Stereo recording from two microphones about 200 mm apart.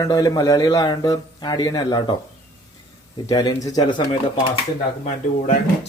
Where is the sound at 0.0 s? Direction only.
20° left (ahead or behind).